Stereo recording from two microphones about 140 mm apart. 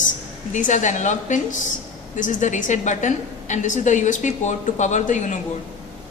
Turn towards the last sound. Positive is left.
turn(degrees=60)  # may be behind; listen again after turning